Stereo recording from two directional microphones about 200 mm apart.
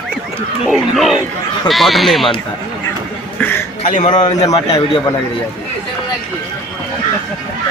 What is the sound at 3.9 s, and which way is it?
Speech, 35° left (ahead or behind).